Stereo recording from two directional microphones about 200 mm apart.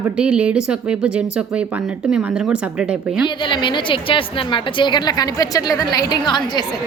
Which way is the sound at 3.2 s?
25° left (ahead or behind).